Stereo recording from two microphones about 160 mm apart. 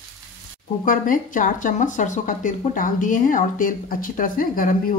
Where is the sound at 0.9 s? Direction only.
55° left (ahead or behind).